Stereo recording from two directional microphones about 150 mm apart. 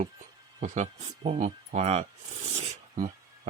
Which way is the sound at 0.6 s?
50° right (ahead or behind).